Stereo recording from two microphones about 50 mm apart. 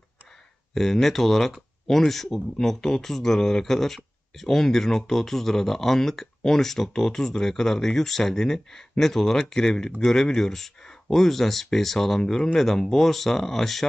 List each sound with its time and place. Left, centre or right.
0.7 s speech: centre